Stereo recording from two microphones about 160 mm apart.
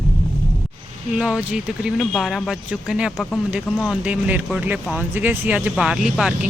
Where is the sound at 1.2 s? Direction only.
5° right (ahead or behind).